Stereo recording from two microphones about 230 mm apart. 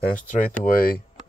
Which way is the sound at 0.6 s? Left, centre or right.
Left.